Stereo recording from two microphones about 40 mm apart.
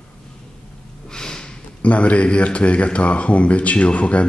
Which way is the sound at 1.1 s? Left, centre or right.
Centre.